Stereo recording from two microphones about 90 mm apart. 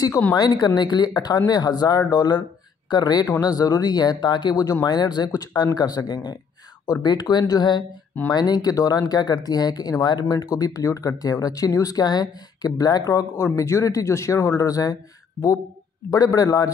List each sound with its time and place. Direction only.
0.3 s speech: 50° left (ahead or behind)
16.1 s speech: 45° left (ahead or behind)